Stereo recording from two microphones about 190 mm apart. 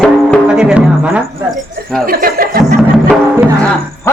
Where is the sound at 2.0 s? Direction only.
50° right (ahead or behind).